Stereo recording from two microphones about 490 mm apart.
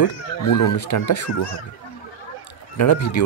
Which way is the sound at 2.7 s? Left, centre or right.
Left.